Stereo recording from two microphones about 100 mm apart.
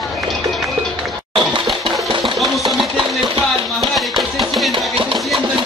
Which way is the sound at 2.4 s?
Centre (ahead or behind).